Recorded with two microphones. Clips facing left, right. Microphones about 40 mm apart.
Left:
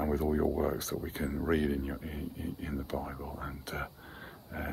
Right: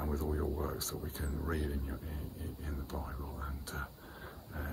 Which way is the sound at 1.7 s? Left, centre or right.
Left.